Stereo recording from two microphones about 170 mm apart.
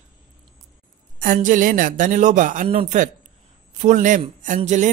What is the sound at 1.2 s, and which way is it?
Speech, 50° right (ahead or behind).